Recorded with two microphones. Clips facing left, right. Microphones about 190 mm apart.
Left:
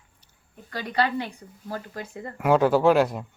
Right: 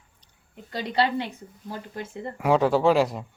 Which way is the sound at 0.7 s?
25° right (ahead or behind).